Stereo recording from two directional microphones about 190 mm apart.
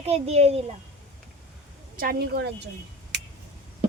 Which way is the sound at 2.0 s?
50° right (ahead or behind).